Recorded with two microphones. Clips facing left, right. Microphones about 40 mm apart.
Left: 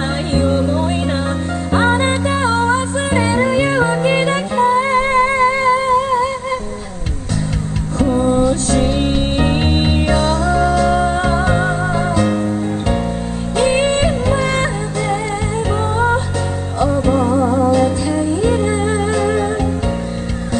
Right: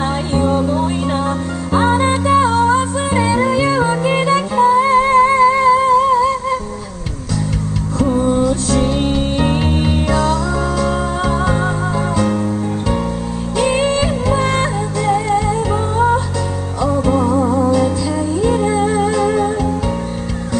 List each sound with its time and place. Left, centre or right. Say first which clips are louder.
0.5 s music: even; left
8.2 s music: left 2 dB; left
13.7 s music: left 1 dB; left
17.1 s music: right 1 dB; left
17.6 s music: left 1 dB; left